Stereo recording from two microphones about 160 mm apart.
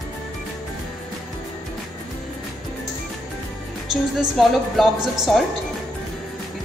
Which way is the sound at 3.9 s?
Centre (ahead or behind).